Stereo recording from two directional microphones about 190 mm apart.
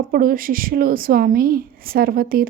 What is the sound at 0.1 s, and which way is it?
A woman's voice, 50° right (ahead or behind).